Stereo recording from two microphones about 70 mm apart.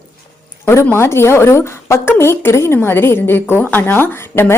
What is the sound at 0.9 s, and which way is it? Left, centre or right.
Speech, left.